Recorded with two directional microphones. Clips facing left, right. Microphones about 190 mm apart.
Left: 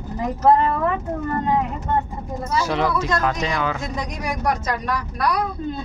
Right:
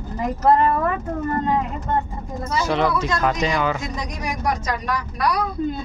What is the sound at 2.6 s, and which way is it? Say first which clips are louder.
Speech: right 3 dB; 5° left (ahead or behind).